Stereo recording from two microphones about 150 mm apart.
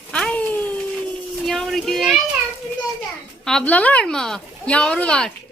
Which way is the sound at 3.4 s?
5° left (ahead or behind).